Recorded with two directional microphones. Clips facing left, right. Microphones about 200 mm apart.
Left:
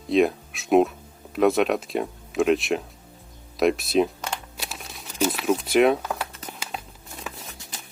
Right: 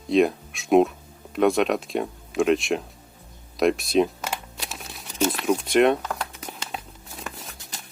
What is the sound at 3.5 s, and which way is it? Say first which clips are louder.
Speech: even; centre (ahead or behind).